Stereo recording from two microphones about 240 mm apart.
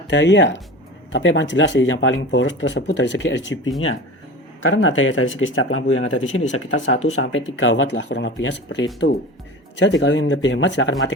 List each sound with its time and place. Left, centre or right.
0.1 s speech: left
6.9 s speech: left
7.2 s speech: left